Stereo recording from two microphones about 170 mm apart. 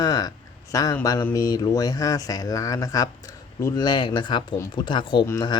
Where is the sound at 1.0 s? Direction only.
20° left (ahead or behind).